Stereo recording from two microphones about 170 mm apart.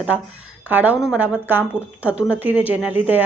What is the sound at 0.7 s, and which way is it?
Speech, 10° right (ahead or behind).